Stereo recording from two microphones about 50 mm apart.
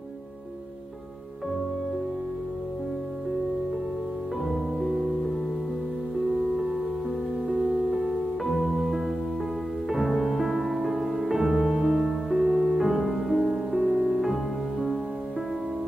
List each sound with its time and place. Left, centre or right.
4.5 s music: centre
6.2 s music: centre
7.9 s music: centre